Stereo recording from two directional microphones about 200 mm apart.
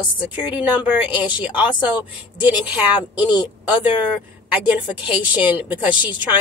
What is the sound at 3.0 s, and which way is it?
Speech, 20° left (ahead or behind).